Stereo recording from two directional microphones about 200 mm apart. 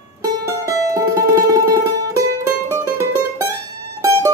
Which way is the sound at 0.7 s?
15° right (ahead or behind).